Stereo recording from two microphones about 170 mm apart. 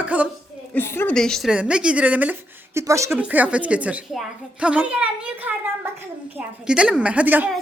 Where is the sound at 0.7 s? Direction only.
15° left (ahead or behind); by 5.5 s 10° right (ahead or behind).